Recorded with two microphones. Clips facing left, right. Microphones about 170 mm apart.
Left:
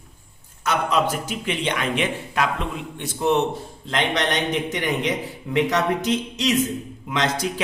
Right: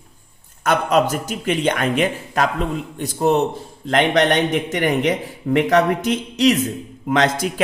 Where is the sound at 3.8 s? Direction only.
50° right (ahead or behind).